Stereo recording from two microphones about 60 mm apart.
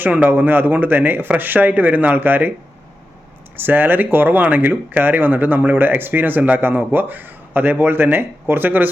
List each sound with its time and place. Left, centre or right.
0.0 s speech: right
3.6 s speech: right